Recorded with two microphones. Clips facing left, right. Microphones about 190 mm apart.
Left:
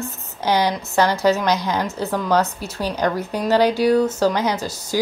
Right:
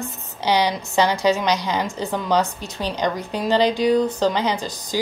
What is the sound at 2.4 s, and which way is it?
Speech, 15° right (ahead or behind).